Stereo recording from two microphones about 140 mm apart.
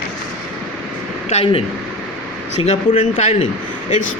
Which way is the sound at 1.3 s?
40° left (ahead or behind).